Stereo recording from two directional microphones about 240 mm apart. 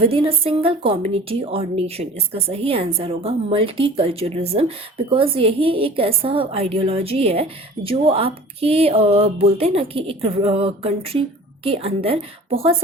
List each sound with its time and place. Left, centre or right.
0.0 s a woman's voice: right